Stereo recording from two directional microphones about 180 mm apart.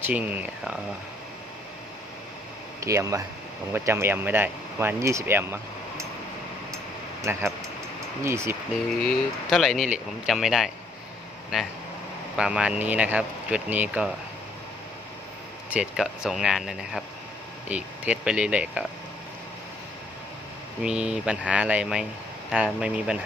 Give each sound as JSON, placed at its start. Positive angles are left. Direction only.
{"t": 0.0, "sound": "speech", "side_deg": -10}
{"t": 2.8, "sound": "speech", "side_deg": -15}
{"t": 7.2, "sound": "speech", "side_deg": -15}
{"t": 9.0, "sound": "speech", "side_deg": 0}
{"t": 15.7, "sound": "speech", "side_deg": -5}
{"t": 20.8, "sound": "speech", "side_deg": -5}